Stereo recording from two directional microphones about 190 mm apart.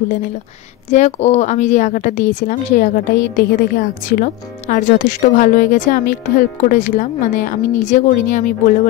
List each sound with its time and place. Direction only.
0.8 s a woman's voice: 35° left (ahead or behind)